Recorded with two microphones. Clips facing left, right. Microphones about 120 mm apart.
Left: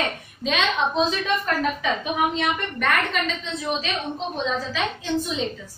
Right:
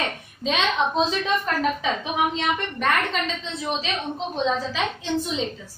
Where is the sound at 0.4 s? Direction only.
25° right (ahead or behind).